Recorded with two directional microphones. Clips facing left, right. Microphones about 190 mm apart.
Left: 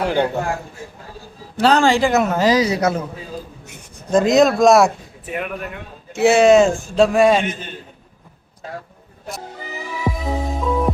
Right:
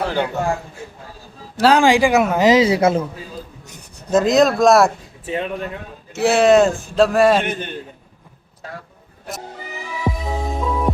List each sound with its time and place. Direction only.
0.0 s a man's voice: 15° left (ahead or behind)
1.5 s speech: 10° right (ahead or behind)
2.5 s a woman's voice: 25° right (ahead or behind)
4.1 s speech: centre (ahead or behind)
5.2 s speech: 25° right (ahead or behind)
6.1 s speech: centre (ahead or behind)
10.0 s music: centre (ahead or behind)